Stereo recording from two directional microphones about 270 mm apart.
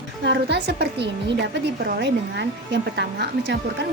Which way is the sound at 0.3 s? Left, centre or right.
Right.